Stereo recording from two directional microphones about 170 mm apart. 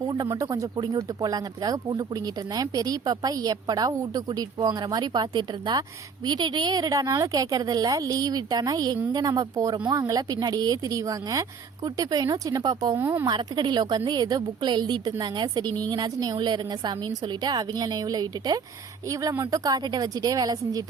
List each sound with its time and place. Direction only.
0.0 s speech: 20° right (ahead or behind)
13.2 s speech: 25° right (ahead or behind)